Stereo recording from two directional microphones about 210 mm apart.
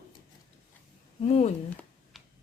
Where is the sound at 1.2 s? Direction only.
30° left (ahead or behind).